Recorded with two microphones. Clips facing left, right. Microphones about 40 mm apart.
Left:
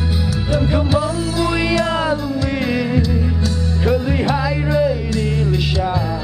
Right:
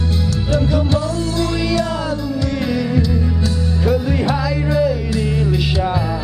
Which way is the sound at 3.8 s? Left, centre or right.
Centre.